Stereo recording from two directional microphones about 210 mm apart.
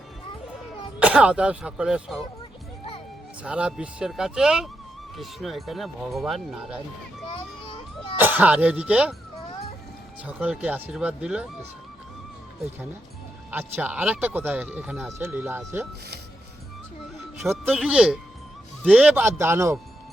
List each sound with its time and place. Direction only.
0.9 s speech: 5° right (ahead or behind)
3.4 s speech: 5° right (ahead or behind)
7.3 s a sound: 25° left (ahead or behind)
8.2 s speech: 10° right (ahead or behind)
10.2 s speech: 5° right (ahead or behind)
13.5 s speech: 10° right (ahead or behind)
17.4 s speech: 5° right (ahead or behind)